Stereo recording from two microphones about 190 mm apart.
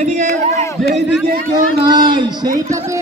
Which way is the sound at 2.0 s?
25° right (ahead or behind).